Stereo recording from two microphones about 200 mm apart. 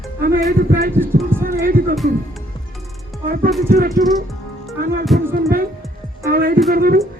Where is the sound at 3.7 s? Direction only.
45° right (ahead or behind).